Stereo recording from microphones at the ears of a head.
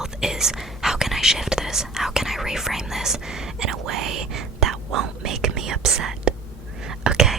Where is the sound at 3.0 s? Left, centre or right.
Right.